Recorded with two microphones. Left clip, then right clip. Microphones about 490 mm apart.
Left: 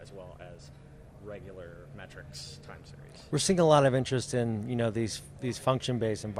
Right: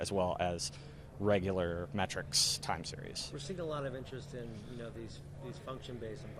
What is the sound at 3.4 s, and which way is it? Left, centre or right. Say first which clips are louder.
Speech: left 19 dB; left.